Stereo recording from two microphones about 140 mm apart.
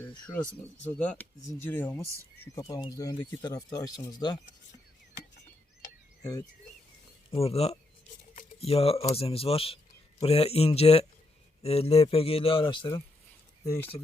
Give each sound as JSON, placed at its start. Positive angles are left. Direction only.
{"t": 0.1, "sound": "speech", "side_deg": 10}
{"t": 2.6, "sound": "speech", "side_deg": 25}
{"t": 7.3, "sound": "a man's voice", "side_deg": 45}
{"t": 13.7, "sound": "speech", "side_deg": 15}